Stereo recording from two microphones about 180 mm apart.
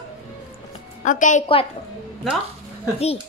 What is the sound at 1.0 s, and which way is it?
Speech, 45° left (ahead or behind).